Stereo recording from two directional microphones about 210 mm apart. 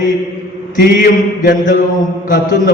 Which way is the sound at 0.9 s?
40° left (ahead or behind).